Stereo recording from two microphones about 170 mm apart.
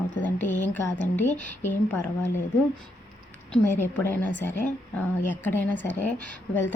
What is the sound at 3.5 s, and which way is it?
Speech, 10° left (ahead or behind).